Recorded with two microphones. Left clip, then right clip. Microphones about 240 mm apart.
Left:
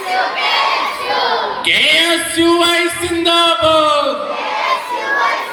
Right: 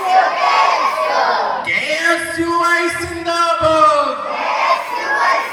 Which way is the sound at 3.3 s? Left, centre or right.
Left.